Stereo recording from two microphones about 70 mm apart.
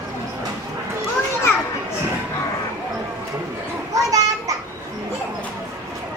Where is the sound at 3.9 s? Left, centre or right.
Right.